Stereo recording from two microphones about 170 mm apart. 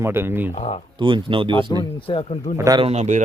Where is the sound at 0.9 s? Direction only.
30° right (ahead or behind).